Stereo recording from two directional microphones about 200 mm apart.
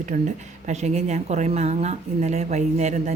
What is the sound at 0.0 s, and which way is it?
Speech, 35° right (ahead or behind).